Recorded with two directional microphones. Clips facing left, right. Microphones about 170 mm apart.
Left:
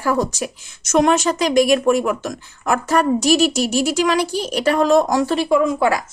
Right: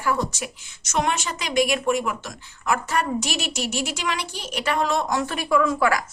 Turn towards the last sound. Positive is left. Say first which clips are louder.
# left 4 dB
turn(degrees=25)  # may be behind; listen again after turning